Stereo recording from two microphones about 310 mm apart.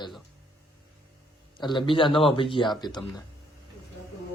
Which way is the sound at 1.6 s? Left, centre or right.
Centre.